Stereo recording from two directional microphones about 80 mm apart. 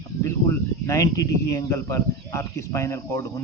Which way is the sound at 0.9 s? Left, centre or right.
Left.